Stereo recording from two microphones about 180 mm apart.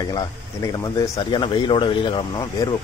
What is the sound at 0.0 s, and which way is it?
Speech, 20° left (ahead or behind).